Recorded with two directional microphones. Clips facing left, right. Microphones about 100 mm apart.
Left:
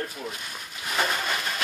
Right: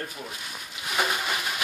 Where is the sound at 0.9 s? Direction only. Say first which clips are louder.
Even; 10° right (ahead or behind).